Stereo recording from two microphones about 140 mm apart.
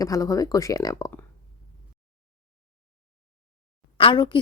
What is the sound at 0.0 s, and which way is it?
Speech, 25° left (ahead or behind).